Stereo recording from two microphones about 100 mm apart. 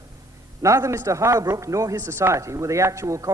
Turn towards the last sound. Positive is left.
turn(degrees=-30)  # may be behind; listen again after turning